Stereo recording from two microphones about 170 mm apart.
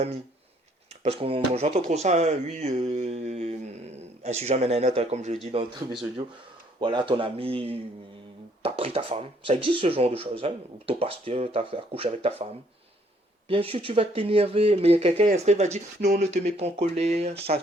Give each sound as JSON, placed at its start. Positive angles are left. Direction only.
{"t": 1.0, "sound": "speech", "side_deg": -35}
{"t": 6.7, "sound": "speech", "side_deg": -30}
{"t": 13.5, "sound": "speech", "side_deg": -35}